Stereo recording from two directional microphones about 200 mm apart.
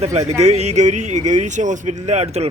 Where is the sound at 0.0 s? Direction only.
35° right (ahead or behind).